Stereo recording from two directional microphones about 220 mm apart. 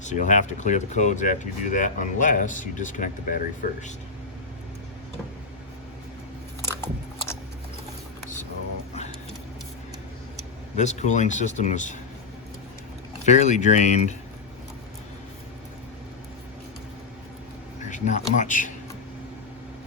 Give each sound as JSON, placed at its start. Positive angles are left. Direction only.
{"t": 0.0, "sound": "speech", "side_deg": 35}
{"t": 6.6, "sound": "biting", "side_deg": 10}
{"t": 10.8, "sound": "speech", "side_deg": 30}
{"t": 13.2, "sound": "speech", "side_deg": 30}
{"t": 17.8, "sound": "speech", "side_deg": 35}